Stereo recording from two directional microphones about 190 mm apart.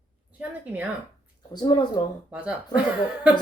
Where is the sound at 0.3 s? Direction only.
5° right (ahead or behind).